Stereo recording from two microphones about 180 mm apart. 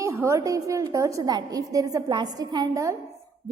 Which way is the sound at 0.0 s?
15° right (ahead or behind).